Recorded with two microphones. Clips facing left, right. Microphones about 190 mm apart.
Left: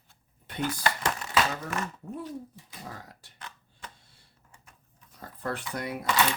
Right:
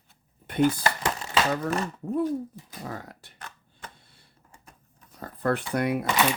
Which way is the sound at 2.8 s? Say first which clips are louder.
Right 7 dB; 60° right (ahead or behind).